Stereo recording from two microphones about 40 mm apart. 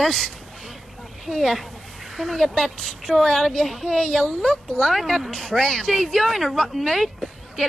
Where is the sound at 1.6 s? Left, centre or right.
Centre.